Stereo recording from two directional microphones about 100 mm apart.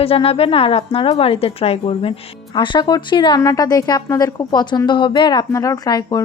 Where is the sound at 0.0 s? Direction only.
75° left (ahead or behind).